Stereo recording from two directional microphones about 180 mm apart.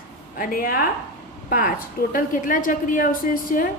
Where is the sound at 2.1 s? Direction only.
50° left (ahead or behind).